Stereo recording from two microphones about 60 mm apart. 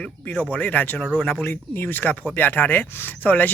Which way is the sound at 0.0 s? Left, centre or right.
Left.